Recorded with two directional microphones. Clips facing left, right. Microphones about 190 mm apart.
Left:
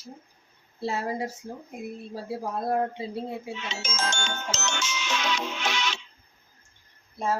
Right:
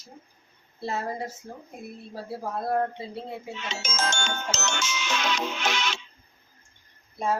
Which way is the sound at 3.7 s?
45° right (ahead or behind).